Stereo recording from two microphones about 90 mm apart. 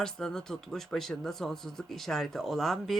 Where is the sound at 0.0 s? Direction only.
5° left (ahead or behind).